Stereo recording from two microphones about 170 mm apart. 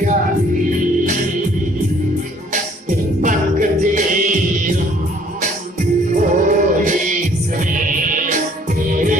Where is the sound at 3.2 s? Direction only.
50° right (ahead or behind).